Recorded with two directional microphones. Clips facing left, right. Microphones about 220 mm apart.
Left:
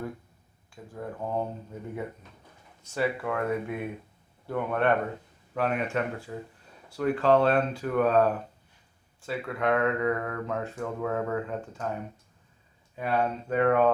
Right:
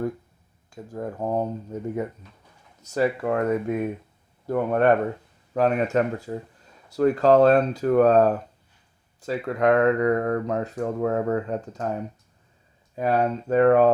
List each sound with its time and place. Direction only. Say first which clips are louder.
0.7 s speech: right 6 dB; 40° right (ahead or behind)
2.8 s speech: right 6 dB; 40° right (ahead or behind)
13.0 s speech: right 5 dB; 40° right (ahead or behind)